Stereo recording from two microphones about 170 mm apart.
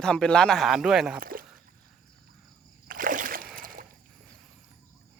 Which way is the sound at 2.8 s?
55° right (ahead or behind).